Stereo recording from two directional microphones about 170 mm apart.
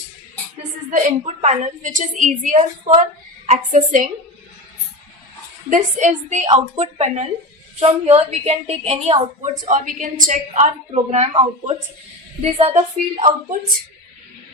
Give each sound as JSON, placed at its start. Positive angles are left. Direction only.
{"t": 0.9, "sound": "a woman's voice", "side_deg": -45}
{"t": 5.7, "sound": "a woman's voice", "side_deg": -45}
{"t": 12.4, "sound": "a woman's voice", "side_deg": -35}